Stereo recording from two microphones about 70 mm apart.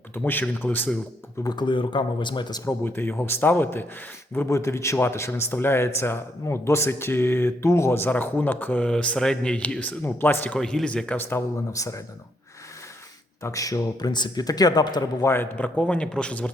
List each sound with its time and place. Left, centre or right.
0.1 s speech: left
1.5 s speech: left
2.6 s speech: left
4.4 s speech: left
8.9 s speech: centre
10.0 s speech: left
10.6 s speech: centre
11.2 s speech: left
11.7 s speech: left
13.4 s speech: left
15.2 s speech: left
15.7 s speech: centre